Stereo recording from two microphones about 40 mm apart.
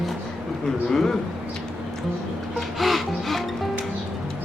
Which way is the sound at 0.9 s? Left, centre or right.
Centre.